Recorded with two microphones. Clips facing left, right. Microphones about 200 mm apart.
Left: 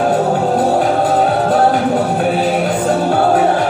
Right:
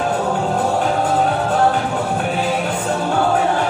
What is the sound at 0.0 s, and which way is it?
Music, 35° left (ahead or behind).